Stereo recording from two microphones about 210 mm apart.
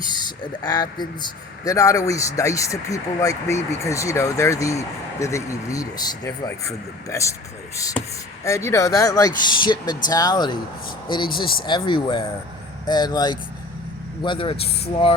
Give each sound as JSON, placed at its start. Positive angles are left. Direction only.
{"t": 0.1, "sound": "speech", "side_deg": 20}
{"t": 11.6, "sound": "speech", "side_deg": 20}